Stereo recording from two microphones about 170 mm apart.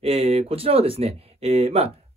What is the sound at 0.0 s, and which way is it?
Speech, 35° right (ahead or behind).